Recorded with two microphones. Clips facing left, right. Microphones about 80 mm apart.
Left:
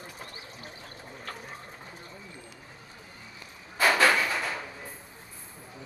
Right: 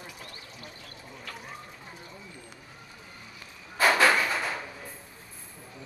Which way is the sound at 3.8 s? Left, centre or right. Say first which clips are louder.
Right 1 dB; centre.